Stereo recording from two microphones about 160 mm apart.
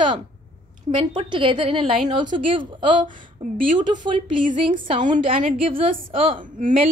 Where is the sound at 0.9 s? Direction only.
35° right (ahead or behind).